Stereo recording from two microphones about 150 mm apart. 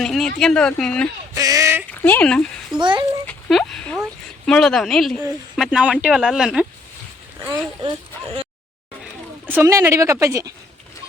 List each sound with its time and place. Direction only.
0.0 s speech: 5° left (ahead or behind)
1.4 s a sound: 25° right (ahead or behind)
1.9 s speech: 10° left (ahead or behind)
2.8 s a child's voice: 30° right (ahead or behind)
3.2 s a sound: 5° left (ahead or behind)
4.4 s speech: 5° left (ahead or behind)
7.8 s speech: 35° right (ahead or behind)
9.5 s speech: 15° right (ahead or behind)